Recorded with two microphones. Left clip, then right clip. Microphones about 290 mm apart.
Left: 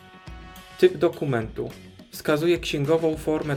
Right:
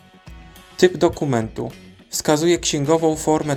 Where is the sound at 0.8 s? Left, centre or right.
Centre.